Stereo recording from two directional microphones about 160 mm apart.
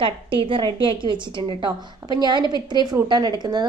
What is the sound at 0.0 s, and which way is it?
A woman's voice, 30° right (ahead or behind).